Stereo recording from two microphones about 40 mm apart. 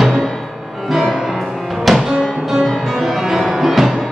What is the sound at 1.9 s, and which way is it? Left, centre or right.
Music, centre.